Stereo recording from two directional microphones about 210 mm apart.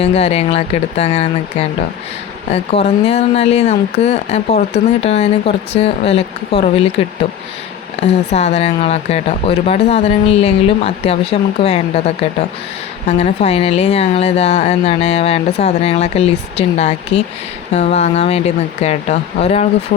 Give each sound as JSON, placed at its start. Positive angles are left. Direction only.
{"t": 0.0, "sound": "speech", "side_deg": 30}
{"t": 8.0, "sound": "speech", "side_deg": 30}